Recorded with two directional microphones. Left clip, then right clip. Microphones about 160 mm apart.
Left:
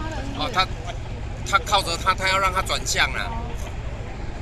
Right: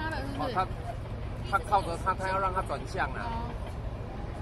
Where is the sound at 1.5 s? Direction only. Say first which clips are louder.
Left 7 dB; 15° right (ahead or behind).